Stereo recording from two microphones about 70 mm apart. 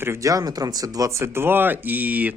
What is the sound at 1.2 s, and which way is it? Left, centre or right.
Speech, right.